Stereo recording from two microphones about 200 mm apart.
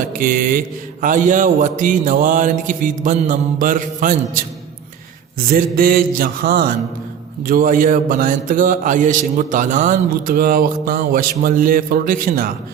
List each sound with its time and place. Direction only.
0.1 s speech: 45° right (ahead or behind)
1.0 s mantra: 40° right (ahead or behind)
5.5 s speech: 45° right (ahead or behind)